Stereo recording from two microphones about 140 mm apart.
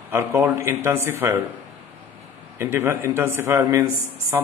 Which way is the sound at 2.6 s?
15° right (ahead or behind).